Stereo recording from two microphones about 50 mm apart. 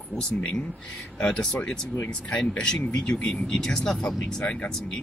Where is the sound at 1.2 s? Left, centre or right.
Centre.